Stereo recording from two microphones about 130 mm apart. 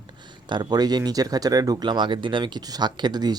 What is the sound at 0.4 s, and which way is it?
Speech, 35° right (ahead or behind).